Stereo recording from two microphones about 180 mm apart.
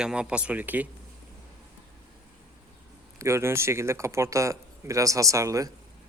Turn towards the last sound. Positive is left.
turn(degrees=-20)  # may be behind; listen again after turning